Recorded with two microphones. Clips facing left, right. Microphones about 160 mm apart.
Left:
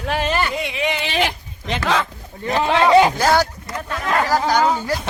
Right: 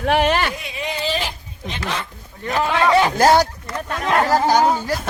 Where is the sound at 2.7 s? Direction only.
20° left (ahead or behind).